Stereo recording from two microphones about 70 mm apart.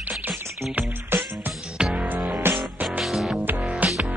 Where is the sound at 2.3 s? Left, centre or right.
Right.